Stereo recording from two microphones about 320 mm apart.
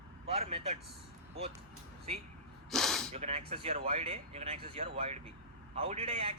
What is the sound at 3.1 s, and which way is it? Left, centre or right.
A man's voice, centre.